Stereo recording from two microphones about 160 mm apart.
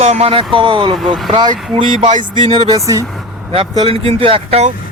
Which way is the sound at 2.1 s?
50° right (ahead or behind).